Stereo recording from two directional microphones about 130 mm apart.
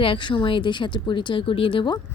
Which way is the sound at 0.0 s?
40° left (ahead or behind).